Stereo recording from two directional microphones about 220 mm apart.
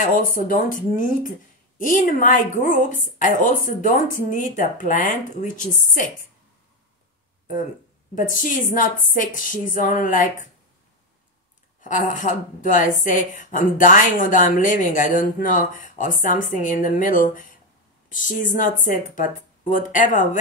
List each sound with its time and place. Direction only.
0.0 s a woman's voice: 35° left (ahead or behind)
8.1 s a woman's voice: 35° left (ahead or behind)
11.8 s a woman's voice: 35° left (ahead or behind)